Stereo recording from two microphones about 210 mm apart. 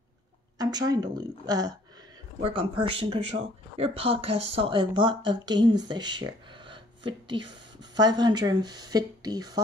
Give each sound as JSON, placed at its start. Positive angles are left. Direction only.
{"t": 0.6, "sound": "speech", "side_deg": -20}